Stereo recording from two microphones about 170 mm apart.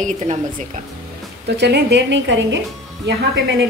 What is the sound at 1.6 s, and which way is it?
A woman's voice, 80° right.